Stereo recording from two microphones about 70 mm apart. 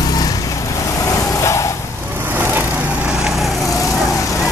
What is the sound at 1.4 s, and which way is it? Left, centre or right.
Vehicle, left.